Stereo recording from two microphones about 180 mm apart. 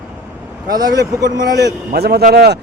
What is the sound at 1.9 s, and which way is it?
Speech, 60° right (ahead or behind).